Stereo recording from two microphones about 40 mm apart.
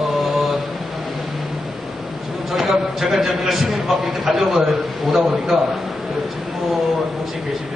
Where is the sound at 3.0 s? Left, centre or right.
Centre.